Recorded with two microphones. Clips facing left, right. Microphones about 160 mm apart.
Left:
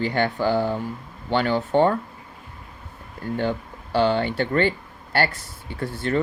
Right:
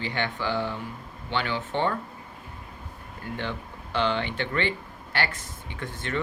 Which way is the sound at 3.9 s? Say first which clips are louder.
Left 6 dB; 40° left (ahead or behind).